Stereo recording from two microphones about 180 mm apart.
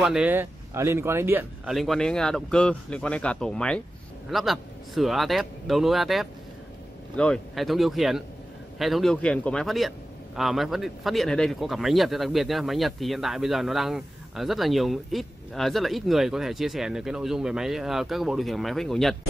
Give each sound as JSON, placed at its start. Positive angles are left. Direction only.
{"t": 0.0, "sound": "speech", "side_deg": -5}
{"t": 1.7, "sound": "a man's voice", "side_deg": 0}